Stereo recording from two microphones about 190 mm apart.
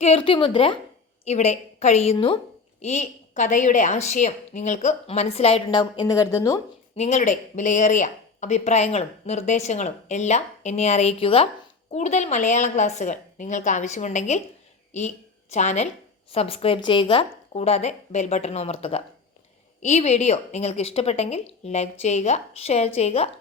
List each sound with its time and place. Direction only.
0.0 s a woman's voice: 30° left (ahead or behind)
2.8 s speech: 40° left (ahead or behind); by 6.6 s 20° left (ahead or behind)
6.9 s a woman's voice: 35° left (ahead or behind)